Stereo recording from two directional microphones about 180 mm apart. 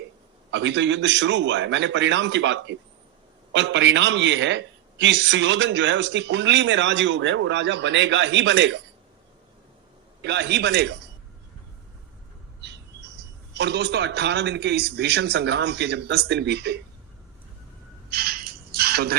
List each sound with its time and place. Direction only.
0.5 s a man's voice: 90° right
10.2 s a man's voice: 70° right (ahead or behind)
12.6 s speech: 75° right (ahead or behind)
18.1 s a sound: 55° right (ahead or behind)